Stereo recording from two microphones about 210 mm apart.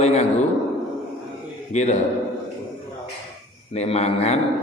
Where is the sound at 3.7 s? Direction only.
30° left (ahead or behind).